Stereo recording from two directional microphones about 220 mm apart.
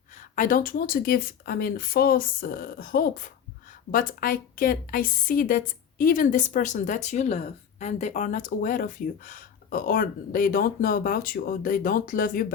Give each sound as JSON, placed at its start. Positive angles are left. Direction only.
{"t": 0.3, "sound": "a woman's voice", "side_deg": 40}